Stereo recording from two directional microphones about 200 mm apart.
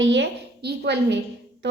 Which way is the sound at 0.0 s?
60° right (ahead or behind).